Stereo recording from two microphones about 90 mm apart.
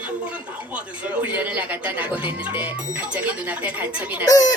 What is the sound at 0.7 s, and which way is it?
Speech, 15° right (ahead or behind).